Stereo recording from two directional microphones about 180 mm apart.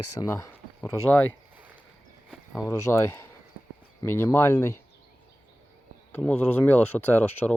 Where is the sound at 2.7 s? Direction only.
15° left (ahead or behind).